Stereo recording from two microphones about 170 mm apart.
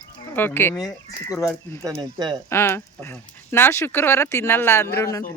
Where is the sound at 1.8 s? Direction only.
20° right (ahead or behind).